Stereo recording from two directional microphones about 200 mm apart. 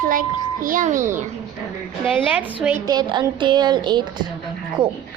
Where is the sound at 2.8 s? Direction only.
20° right (ahead or behind).